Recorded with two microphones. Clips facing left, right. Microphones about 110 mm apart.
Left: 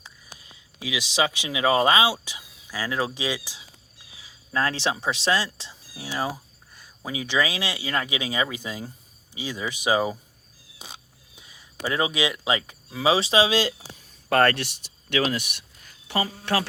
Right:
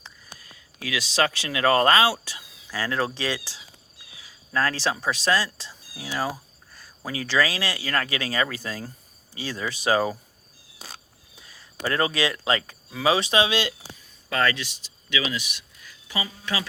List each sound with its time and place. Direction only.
0.0 s speech: 15° left (ahead or behind)
4.5 s speech: 25° left (ahead or behind)
10.8 s a sound: 20° left (ahead or behind); by 13.7 s 35° left (ahead or behind)
14.3 s speech: 55° left (ahead or behind)